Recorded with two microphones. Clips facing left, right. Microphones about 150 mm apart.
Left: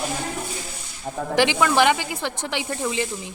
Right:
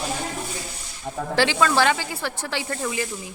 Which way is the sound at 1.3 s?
15° left (ahead or behind).